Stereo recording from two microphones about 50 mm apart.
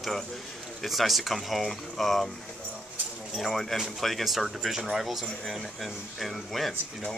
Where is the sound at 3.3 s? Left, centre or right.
Centre.